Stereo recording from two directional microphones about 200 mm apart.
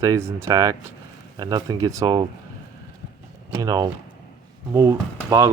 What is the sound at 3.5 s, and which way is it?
Speech, 20° right (ahead or behind).